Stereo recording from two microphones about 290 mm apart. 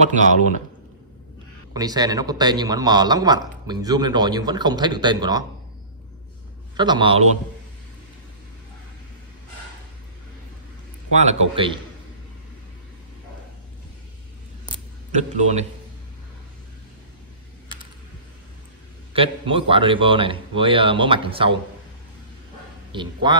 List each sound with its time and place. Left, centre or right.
0.0 s a man's voice: right
1.7 s a man's voice: centre
6.8 s a man's voice: centre
11.1 s a man's voice: right
14.7 s a sound: right
19.1 s a man's voice: centre
22.8 s a man's voice: centre